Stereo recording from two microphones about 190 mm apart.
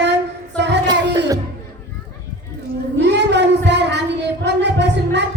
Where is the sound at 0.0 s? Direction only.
65° right (ahead or behind).